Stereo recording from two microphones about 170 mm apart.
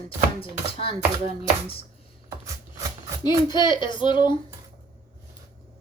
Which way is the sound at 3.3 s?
25° left (ahead or behind).